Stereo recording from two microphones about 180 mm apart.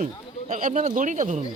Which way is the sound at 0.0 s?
45° right (ahead or behind).